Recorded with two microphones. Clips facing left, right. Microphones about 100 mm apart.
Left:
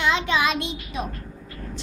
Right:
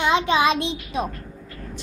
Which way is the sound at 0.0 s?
25° right (ahead or behind).